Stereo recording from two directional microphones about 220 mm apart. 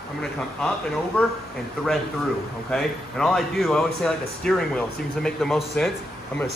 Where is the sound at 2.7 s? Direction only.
Centre (ahead or behind).